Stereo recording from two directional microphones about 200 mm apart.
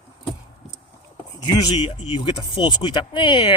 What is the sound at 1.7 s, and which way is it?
Speech, 30° left (ahead or behind).